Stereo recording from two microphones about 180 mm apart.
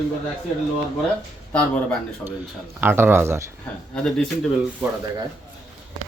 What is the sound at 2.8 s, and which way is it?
Speech, 10° right (ahead or behind).